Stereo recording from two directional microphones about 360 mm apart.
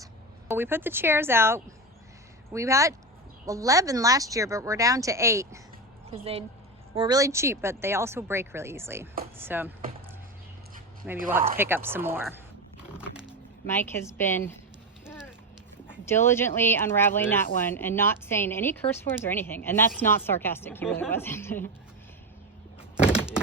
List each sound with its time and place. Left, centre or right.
0.0 s a woman's voice: centre
11.5 s a woman's voice: centre
13.2 s speech: centre
15.0 s a sound: centre
16.0 s a woman's voice: centre
23.0 s power windows: centre